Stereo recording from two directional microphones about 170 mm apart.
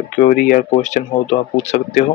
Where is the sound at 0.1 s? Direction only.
50° left (ahead or behind).